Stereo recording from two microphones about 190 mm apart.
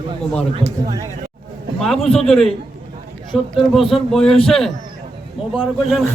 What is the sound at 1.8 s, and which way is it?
A man's voice, centre (ahead or behind).